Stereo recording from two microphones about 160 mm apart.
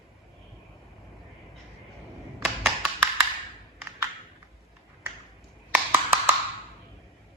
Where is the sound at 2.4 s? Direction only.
Centre (ahead or behind).